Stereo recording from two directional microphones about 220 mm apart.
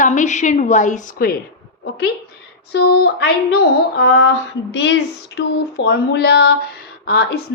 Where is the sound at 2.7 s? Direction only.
45° left (ahead or behind).